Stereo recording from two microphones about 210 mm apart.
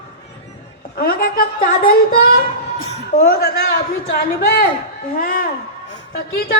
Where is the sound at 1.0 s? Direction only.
45° left (ahead or behind).